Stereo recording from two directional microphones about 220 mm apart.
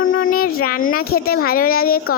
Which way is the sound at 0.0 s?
65° left (ahead or behind).